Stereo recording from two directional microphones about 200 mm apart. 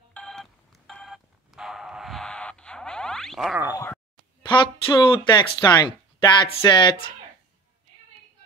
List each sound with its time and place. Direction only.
0.1 s telephone: 5° left (ahead or behind)
3.7 s speech: 15° left (ahead or behind)
4.5 s speech: 25° left (ahead or behind)